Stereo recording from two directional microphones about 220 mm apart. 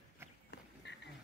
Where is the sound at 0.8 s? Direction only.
50° left (ahead or behind).